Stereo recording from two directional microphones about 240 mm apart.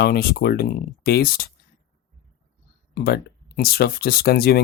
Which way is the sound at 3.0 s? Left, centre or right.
Left.